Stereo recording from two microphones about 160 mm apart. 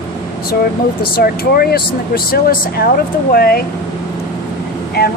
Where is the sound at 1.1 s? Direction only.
70° left (ahead or behind).